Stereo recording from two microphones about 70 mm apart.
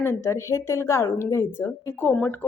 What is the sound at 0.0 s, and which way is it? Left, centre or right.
A woman's voice, left.